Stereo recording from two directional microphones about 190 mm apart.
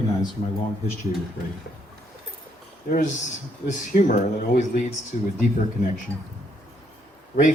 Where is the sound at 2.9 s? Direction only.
40° left (ahead or behind).